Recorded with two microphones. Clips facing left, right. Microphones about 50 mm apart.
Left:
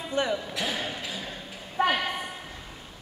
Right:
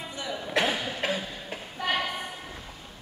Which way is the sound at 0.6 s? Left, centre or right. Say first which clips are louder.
Right 4 dB; right.